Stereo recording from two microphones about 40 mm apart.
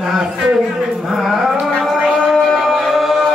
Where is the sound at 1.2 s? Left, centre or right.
Centre.